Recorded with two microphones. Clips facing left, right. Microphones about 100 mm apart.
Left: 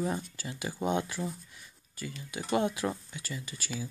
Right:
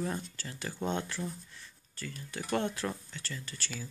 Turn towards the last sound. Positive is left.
turn(degrees=10)  # may be behind; listen again after turning